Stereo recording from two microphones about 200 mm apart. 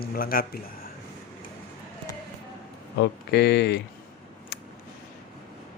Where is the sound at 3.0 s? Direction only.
55° left (ahead or behind).